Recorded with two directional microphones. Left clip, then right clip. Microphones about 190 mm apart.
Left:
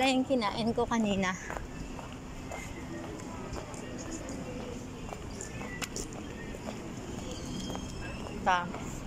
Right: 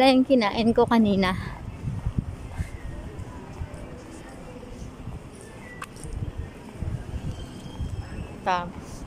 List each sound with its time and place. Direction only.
0.0 s a woman's voice: 30° right (ahead or behind)
8.5 s a woman's voice: 15° right (ahead or behind)